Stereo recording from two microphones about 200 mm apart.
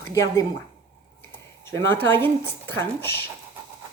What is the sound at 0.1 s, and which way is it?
Speech, 15° left (ahead or behind).